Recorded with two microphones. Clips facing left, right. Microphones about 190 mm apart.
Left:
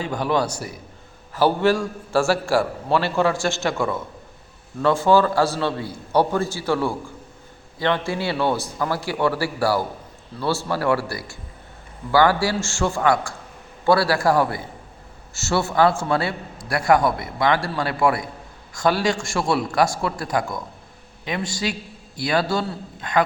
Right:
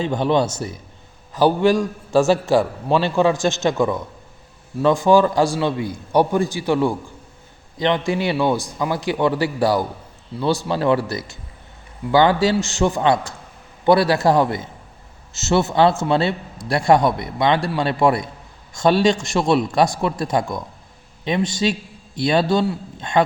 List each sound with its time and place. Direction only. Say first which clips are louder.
0.0 s a man's voice: right 4 dB; 20° right (ahead or behind)